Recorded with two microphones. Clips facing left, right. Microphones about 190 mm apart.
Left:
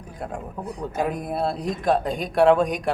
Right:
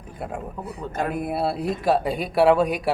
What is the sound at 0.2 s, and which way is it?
Speech, 5° right (ahead or behind).